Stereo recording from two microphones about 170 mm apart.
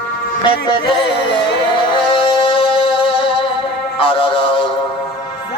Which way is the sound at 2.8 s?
30° left (ahead or behind).